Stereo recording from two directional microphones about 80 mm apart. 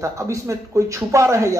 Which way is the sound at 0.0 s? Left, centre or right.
Right.